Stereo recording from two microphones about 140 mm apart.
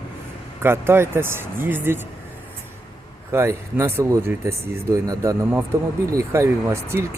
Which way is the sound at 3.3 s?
15° right (ahead or behind).